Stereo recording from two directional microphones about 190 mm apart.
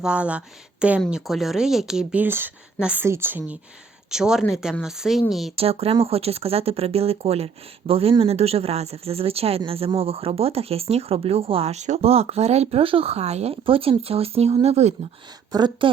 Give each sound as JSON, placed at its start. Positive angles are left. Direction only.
{"t": 0.0, "sound": "a woman's voice", "side_deg": -5}
{"t": 5.5, "sound": "speech", "side_deg": -30}
{"t": 15.5, "sound": "speech", "side_deg": -20}